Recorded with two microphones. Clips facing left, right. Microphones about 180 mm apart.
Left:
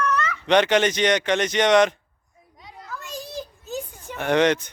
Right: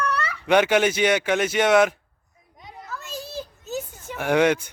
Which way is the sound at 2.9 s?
15° left (ahead or behind).